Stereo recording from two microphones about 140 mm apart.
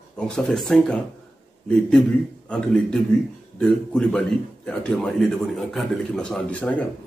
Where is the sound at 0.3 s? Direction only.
5° left (ahead or behind).